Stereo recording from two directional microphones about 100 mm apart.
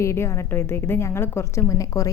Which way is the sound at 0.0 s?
30° left (ahead or behind).